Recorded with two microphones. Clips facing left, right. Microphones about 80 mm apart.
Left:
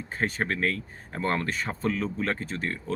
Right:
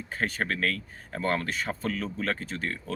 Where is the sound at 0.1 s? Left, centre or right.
Left.